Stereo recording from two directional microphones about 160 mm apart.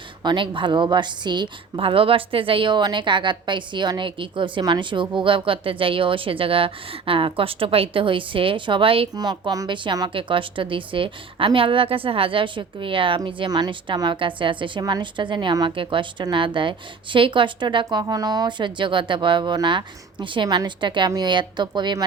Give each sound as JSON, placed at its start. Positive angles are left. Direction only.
{"t": 0.2, "sound": "a woman's voice", "side_deg": -30}